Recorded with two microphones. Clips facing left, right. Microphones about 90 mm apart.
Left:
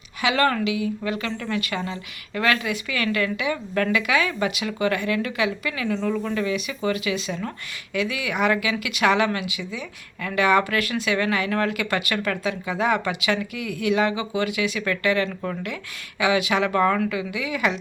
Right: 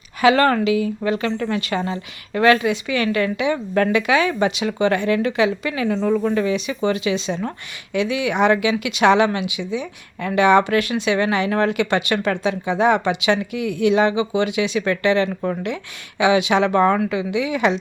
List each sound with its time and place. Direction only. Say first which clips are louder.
0.2 s speech: right 6 dB; 40° right (ahead or behind); by 17.7 s 25° right (ahead or behind)